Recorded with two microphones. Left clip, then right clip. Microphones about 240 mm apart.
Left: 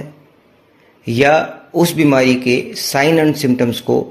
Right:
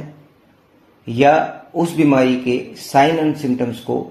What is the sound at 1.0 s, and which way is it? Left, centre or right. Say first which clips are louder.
Speech: left 1 dB; left.